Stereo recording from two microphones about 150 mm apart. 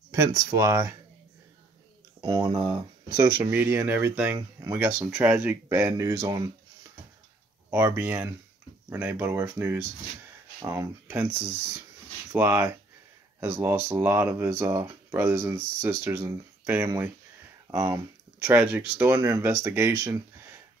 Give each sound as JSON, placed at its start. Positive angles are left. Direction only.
{"t": 0.1, "sound": "speech", "side_deg": -20}
{"t": 2.2, "sound": "speech", "side_deg": -30}
{"t": 3.2, "sound": "speech", "side_deg": -15}
{"t": 7.7, "sound": "speech", "side_deg": -15}